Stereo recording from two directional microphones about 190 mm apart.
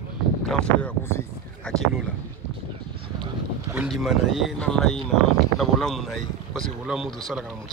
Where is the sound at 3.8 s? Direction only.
Centre (ahead or behind).